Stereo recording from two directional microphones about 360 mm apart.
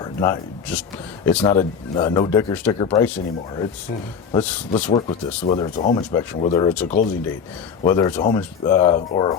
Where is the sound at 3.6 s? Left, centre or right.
Centre.